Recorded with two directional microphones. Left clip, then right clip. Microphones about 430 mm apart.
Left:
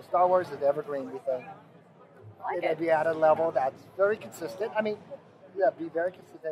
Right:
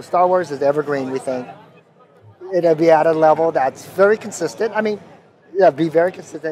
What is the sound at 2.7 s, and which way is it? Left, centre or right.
Speech, right.